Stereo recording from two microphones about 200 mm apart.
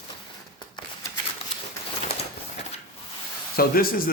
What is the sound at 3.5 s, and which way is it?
Speech, 45° left (ahead or behind).